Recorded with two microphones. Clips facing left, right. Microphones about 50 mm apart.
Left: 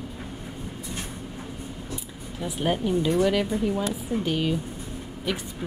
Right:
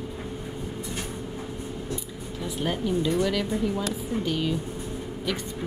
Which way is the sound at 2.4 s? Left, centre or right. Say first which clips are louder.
Left 3 dB; centre.